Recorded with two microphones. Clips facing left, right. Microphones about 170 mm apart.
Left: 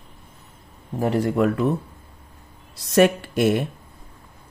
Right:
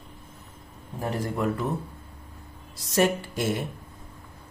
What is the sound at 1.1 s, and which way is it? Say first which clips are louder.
Speech: left 8 dB; 70° left (ahead or behind).